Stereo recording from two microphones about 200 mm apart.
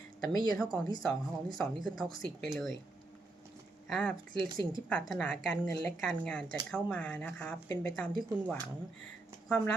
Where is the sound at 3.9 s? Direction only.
5° left (ahead or behind).